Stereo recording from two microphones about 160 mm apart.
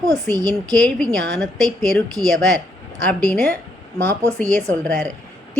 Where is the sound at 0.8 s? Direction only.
5° left (ahead or behind).